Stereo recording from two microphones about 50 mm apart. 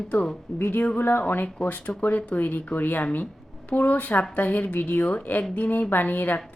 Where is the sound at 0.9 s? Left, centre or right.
Left.